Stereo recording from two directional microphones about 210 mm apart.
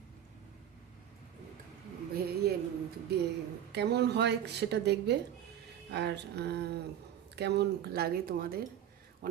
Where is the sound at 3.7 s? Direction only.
50° right (ahead or behind).